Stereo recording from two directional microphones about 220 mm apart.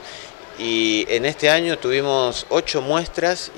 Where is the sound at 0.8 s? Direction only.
15° left (ahead or behind).